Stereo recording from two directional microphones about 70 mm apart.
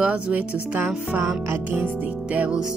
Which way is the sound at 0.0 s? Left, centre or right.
Right.